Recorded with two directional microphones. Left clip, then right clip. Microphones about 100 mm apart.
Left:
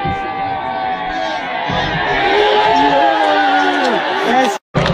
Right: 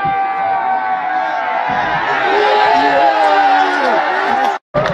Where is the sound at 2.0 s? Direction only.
60° right (ahead or behind).